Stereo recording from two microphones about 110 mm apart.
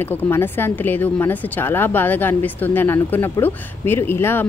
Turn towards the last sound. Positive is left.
turn(degrees=20)  # may be behind; listen again after turning